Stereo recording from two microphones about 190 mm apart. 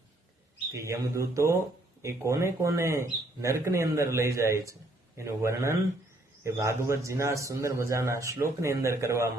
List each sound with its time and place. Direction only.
0.7 s speech: 15° right (ahead or behind)